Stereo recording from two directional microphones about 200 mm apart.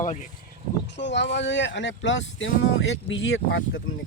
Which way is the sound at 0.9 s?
60° left (ahead or behind).